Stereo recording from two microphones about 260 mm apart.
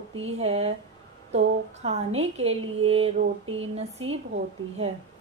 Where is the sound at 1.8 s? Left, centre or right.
Right.